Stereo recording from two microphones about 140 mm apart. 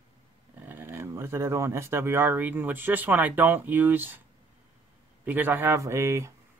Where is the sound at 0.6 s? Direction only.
15° right (ahead or behind).